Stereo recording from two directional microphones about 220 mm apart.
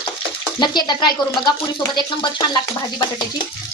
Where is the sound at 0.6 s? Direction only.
20° left (ahead or behind).